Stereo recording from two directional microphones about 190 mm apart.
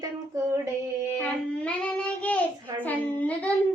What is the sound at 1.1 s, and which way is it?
A child's voice, 5° left (ahead or behind).